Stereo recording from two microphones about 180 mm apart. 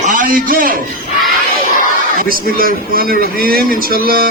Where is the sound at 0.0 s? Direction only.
45° right (ahead or behind).